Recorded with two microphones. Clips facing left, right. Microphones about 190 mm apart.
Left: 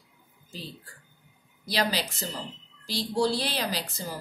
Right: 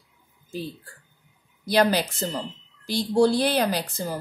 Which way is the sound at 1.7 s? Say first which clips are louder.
Right 8 dB; 55° right (ahead or behind).